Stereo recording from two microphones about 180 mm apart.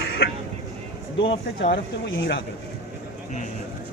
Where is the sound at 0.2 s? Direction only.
65° left (ahead or behind).